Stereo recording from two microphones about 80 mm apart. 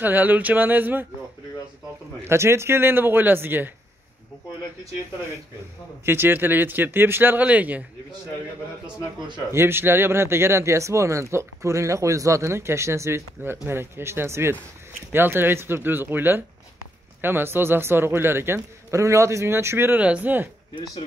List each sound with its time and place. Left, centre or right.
0.0 s a man's voice: right
2.2 s a man's voice: right
6.0 s a man's voice: right
9.5 s a man's voice: right
20.0 s a man's voice: centre